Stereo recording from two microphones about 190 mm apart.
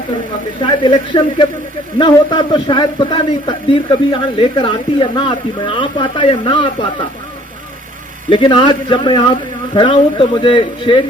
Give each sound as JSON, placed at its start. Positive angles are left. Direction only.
{"t": 0.6, "sound": "speech", "side_deg": 25}
{"t": 8.3, "sound": "speech", "side_deg": 25}